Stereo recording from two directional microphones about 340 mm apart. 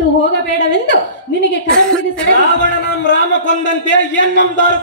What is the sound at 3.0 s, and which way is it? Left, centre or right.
A man's voice, left.